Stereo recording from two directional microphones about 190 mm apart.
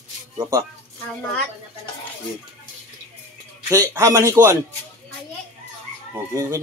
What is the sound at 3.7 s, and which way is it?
Speech, 15° right (ahead or behind).